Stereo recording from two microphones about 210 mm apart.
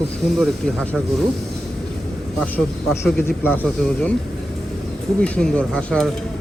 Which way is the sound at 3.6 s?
5° left (ahead or behind).